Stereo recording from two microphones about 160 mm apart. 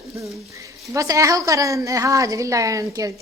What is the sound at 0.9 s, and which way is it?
A woman's voice, 20° right (ahead or behind).